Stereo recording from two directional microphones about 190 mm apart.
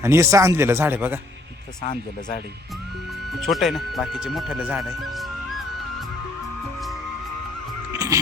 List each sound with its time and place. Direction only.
0.0 s speech: 15° right (ahead or behind)
3.4 s speech: centre (ahead or behind)
7.9 s music: 20° right (ahead or behind)